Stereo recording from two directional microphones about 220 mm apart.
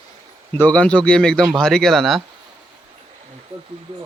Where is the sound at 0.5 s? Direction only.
5° left (ahead or behind).